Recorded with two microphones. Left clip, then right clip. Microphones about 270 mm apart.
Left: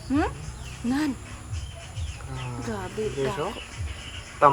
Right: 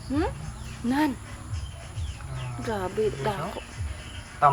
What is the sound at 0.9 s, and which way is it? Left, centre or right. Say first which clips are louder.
Speech: right 2 dB; centre.